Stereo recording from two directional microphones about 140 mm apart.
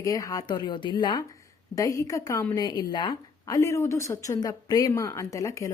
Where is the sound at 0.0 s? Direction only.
25° left (ahead or behind).